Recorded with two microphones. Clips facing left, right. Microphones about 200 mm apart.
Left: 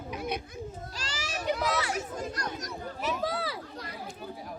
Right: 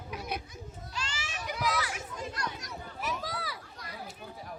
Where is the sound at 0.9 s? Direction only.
40° left (ahead or behind).